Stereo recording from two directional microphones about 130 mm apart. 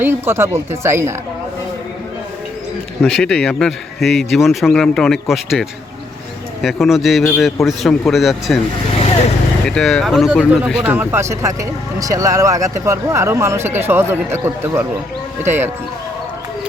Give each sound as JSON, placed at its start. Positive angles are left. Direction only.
{"t": 0.0, "sound": "speech", "side_deg": -20}
{"t": 3.0, "sound": "speech", "side_deg": 5}
{"t": 9.6, "sound": "speech", "side_deg": 5}
{"t": 10.8, "sound": "speech", "side_deg": -15}